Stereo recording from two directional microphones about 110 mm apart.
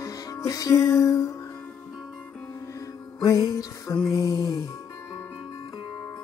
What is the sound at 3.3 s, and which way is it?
Music, 30° left (ahead or behind).